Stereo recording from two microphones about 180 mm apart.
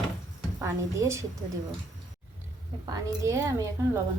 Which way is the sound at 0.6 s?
15° right (ahead or behind).